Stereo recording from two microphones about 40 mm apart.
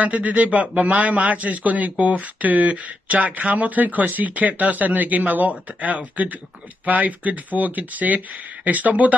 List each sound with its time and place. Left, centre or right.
0.0 s a man's voice: right